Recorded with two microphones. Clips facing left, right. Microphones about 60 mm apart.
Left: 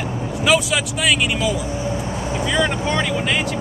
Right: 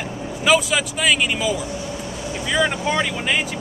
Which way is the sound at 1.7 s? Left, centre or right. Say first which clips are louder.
Left 4 dB; left.